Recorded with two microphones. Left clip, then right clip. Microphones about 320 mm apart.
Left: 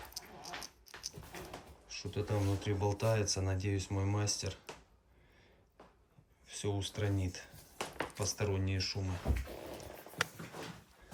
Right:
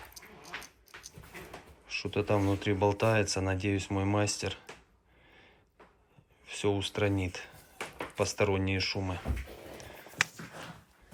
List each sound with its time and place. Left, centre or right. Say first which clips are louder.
0.1 s dog: left 2 dB; left
0.6 s a sound: left 2 dB; centre
1.9 s speech: right 9 dB; centre
6.4 s speech: right 8 dB; centre